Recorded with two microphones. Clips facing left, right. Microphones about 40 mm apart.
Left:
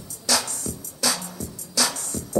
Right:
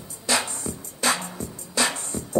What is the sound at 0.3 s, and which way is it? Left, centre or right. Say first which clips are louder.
Music: right 1 dB; right.